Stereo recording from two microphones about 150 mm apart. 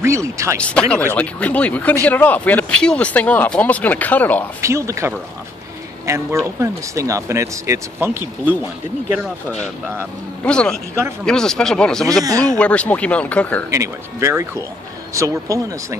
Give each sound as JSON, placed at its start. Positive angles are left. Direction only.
{"t": 0.0, "sound": "speech", "side_deg": -20}
{"t": 0.6, "sound": "speech", "side_deg": 10}
{"t": 4.6, "sound": "speech", "side_deg": -20}
{"t": 9.2, "sound": "speech", "side_deg": 0}
{"t": 12.2, "sound": "speech", "side_deg": -25}
{"t": 12.5, "sound": "speech", "side_deg": 10}
{"t": 13.7, "sound": "speech", "side_deg": -20}